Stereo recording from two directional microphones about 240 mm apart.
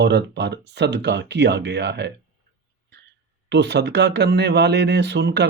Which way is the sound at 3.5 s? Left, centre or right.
Right.